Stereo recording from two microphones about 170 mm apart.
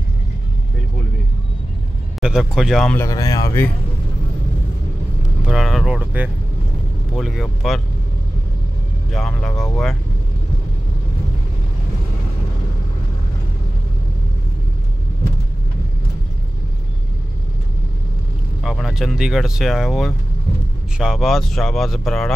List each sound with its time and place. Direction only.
2.1 s speech: 5° right (ahead or behind)
3.0 s speech: 20° left (ahead or behind)
5.5 s speech: centre (ahead or behind)
9.1 s speech: 5° left (ahead or behind)
18.6 s speech: centre (ahead or behind)